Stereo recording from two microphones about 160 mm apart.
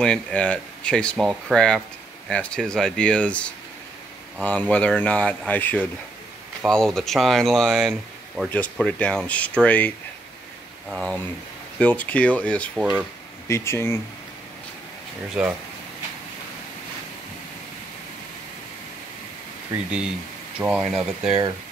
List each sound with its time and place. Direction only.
0.0 s speech: 5° left (ahead or behind)
8.5 s speech: 10° left (ahead or behind)
12.7 s speech: 5° right (ahead or behind)
13.5 s speech: 15° left (ahead or behind)
15.4 s speech: 5° right (ahead or behind)
20.5 s speech: 5° right (ahead or behind)